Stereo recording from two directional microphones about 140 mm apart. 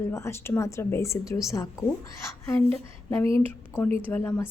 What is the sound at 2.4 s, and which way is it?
Speech, 15° left (ahead or behind).